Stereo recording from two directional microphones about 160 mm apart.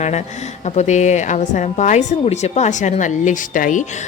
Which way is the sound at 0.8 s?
50° left (ahead or behind).